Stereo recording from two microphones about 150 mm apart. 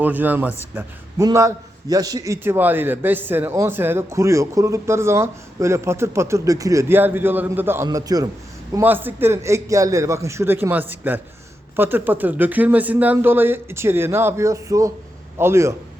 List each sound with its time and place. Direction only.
0.0 s a man's voice: 10° right (ahead or behind)
7.9 s a man's voice: 25° right (ahead or behind)
8.7 s a man's voice: 15° right (ahead or behind)